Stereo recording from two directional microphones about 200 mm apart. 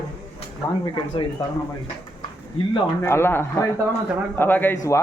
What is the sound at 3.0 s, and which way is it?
A man's voice, 10° left (ahead or behind).